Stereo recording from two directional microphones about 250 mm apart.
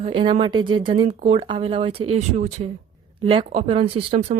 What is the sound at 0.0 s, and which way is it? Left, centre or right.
Speech, centre.